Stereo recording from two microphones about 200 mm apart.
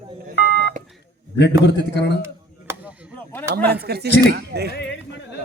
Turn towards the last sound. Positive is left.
turn(degrees=60)  # may be behind; listen again after turning